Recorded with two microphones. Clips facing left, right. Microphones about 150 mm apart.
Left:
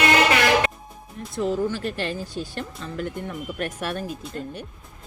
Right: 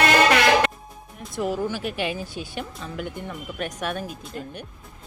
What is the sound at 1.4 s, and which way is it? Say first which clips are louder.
Speech: left 2 dB; 5° right (ahead or behind).